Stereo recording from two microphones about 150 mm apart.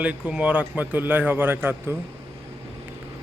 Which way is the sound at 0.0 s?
10° right (ahead or behind).